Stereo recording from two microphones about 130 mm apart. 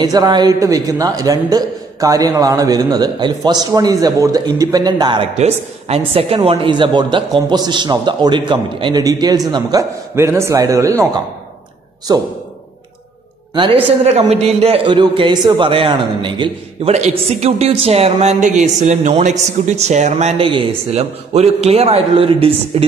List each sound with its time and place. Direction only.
0.0 s a man's voice: 30° right (ahead or behind)
5.3 s a woman's voice: 55° right (ahead or behind); by 11.1 s 25° right (ahead or behind)
12.1 s a woman's voice: 35° right (ahead or behind)
14.0 s a man's voice: 55° right (ahead or behind)
14.9 s a woman's voice: 35° right (ahead or behind)
16.9 s a man's voice: 60° right (ahead or behind)